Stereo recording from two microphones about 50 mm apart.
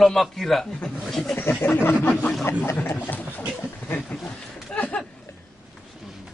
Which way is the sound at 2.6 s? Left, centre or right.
Left.